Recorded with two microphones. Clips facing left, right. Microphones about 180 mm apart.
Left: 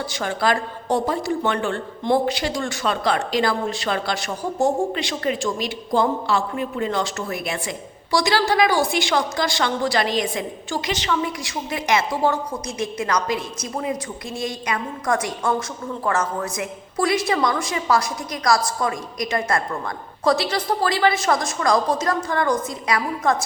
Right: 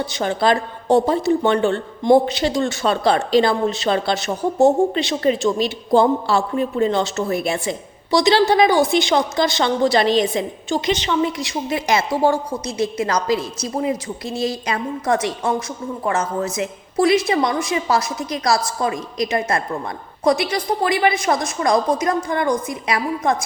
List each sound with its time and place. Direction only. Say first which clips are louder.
0.0 s a woman's voice: right 4 dB; 20° right (ahead or behind)